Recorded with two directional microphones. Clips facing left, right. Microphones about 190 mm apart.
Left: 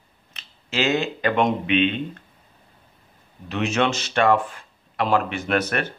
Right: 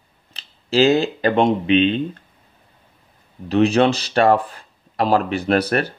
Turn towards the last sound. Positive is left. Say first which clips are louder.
# right 5 dB
turn(degrees=-35)  # may be behind; listen again after turning